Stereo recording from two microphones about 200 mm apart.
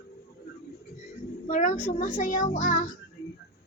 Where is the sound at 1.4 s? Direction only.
40° left (ahead or behind).